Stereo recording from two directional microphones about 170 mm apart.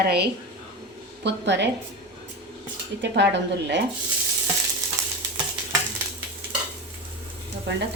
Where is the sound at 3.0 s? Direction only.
90° right.